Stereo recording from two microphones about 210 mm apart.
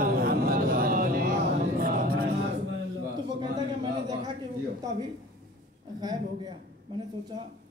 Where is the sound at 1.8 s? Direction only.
45° right (ahead or behind).